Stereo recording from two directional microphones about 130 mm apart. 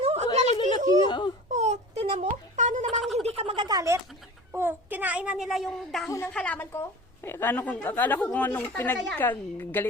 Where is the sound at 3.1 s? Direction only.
50° right (ahead or behind).